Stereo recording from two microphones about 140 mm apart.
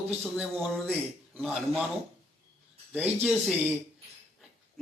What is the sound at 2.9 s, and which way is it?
Speech, 10° right (ahead or behind).